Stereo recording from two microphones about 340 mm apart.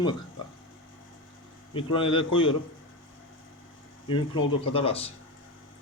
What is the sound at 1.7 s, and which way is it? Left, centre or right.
Speech, centre.